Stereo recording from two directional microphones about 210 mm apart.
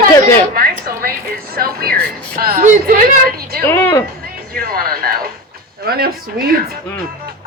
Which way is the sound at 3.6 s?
10° left (ahead or behind).